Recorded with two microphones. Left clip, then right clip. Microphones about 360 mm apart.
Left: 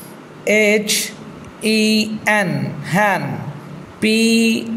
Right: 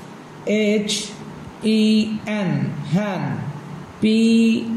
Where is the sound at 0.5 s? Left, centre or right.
Centre.